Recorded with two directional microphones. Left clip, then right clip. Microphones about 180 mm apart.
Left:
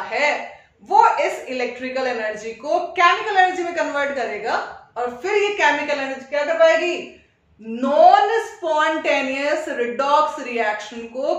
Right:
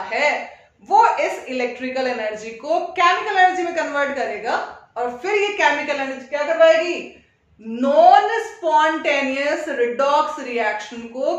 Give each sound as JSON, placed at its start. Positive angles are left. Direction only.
{"t": 0.1, "sound": "speech", "side_deg": -15}
{"t": 7.7, "sound": "speech", "side_deg": -15}